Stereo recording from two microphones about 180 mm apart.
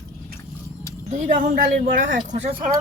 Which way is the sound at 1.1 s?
45° right (ahead or behind).